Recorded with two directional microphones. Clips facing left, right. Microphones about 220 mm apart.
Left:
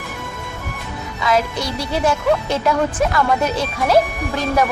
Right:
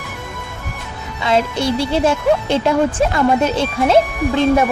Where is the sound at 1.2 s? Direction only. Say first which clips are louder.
Right 3 dB; 25° right (ahead or behind).